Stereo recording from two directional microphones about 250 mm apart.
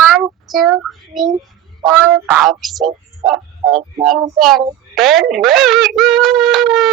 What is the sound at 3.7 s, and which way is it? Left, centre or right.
Music, right.